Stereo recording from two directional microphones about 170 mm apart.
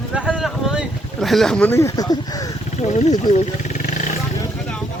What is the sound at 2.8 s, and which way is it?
Speech, 45° left (ahead or behind).